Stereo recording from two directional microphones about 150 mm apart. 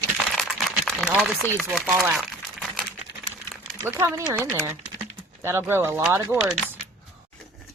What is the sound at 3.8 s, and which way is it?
Speech, 15° right (ahead or behind).